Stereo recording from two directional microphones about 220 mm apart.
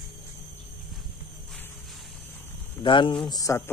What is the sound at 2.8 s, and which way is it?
Speech, 20° left (ahead or behind).